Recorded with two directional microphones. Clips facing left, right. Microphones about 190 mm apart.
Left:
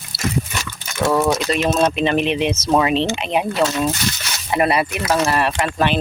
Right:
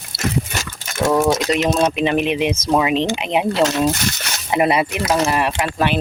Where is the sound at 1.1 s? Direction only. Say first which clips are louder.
Right 2 dB; 10° right (ahead or behind).